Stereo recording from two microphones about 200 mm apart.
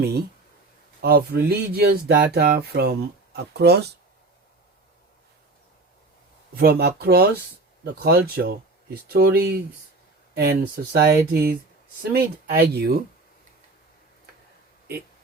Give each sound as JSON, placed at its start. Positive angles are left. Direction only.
{"t": 1.0, "sound": "speech", "side_deg": -50}
{"t": 6.6, "sound": "speech", "side_deg": -50}